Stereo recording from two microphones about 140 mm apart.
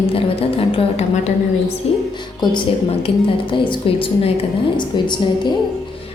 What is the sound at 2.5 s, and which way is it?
Music, 40° left (ahead or behind).